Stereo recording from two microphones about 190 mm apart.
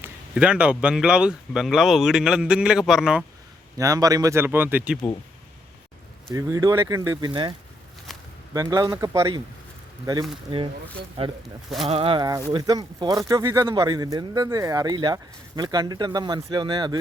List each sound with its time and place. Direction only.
0.0 s speech: 5° right (ahead or behind)
3.8 s speech: 20° right (ahead or behind)
6.3 s speech: 15° right (ahead or behind)
8.1 s a sound: centre (ahead or behind)
8.5 s speech: 20° right (ahead or behind)